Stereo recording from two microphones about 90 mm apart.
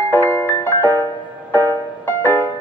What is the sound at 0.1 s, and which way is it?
Music, 25° left (ahead or behind).